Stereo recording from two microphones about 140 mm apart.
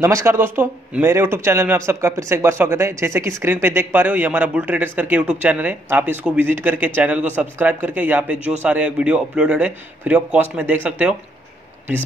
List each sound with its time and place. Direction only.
0.0 s a man's voice: 20° right (ahead or behind)